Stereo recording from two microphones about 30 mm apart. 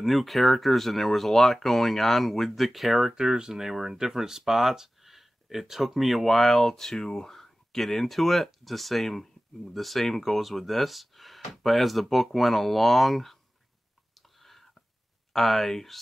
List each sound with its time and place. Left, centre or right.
0.0 s speech: centre
3.2 s speech: right; by 13.4 s centre
14.4 s a sound: centre
15.3 s speech: centre